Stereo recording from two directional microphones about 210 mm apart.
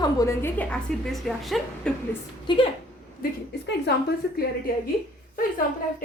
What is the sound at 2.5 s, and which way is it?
Speech, 20° left (ahead or behind).